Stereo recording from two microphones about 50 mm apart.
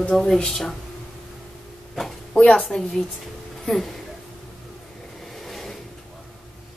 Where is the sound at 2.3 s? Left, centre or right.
Left.